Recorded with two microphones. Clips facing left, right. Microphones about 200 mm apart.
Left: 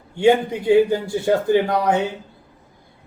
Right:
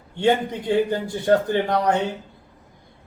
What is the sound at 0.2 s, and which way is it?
Speech, 10° left (ahead or behind).